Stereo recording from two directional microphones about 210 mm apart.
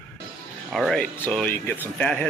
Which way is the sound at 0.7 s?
Centre (ahead or behind).